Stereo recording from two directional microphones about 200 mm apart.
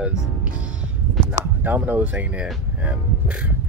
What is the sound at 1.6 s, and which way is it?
Speech, 10° right (ahead or behind).